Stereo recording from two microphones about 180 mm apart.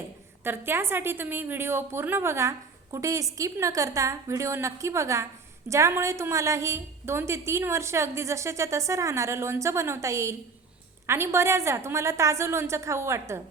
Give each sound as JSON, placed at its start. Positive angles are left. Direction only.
{"t": 0.4, "sound": "a woman's voice", "side_deg": -10}